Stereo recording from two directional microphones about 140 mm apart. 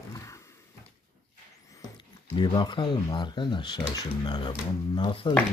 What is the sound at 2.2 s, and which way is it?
Speech, 40° left (ahead or behind).